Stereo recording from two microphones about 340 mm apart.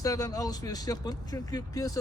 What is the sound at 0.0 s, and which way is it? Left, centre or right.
Speech, centre.